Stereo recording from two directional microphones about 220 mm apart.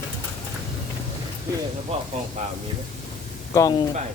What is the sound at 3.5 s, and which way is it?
Speech, 15° left (ahead or behind).